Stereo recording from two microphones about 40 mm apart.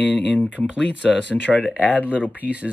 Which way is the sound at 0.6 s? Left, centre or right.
Right.